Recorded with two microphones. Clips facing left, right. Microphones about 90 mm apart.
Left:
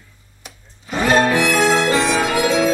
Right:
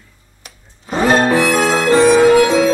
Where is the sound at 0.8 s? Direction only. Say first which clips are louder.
Right 2 dB; 35° right (ahead or behind).